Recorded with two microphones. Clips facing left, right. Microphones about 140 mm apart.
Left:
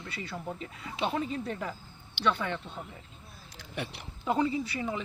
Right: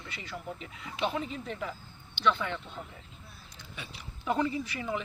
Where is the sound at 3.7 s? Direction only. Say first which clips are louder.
Left 9 dB; 65° left (ahead or behind).